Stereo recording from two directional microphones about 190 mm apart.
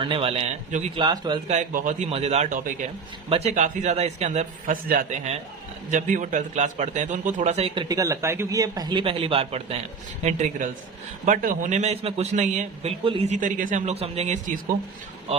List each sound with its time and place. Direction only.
0.0 s a man's voice: 30° right (ahead or behind)
0.9 s a man's voice: 20° right (ahead or behind)
1.5 s a man's voice: 40° right (ahead or behind)
7.9 s a man's voice: 15° right (ahead or behind); by 14.6 s 40° right (ahead or behind)